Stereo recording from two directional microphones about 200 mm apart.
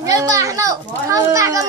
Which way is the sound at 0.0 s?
15° right (ahead or behind).